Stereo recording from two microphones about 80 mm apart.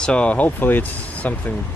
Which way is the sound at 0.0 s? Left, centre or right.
Centre.